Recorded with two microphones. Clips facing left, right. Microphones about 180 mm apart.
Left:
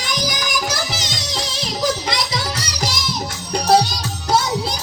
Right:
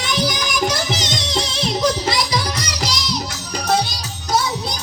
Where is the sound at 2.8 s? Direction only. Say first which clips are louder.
Left 3 dB; 50° left (ahead or behind).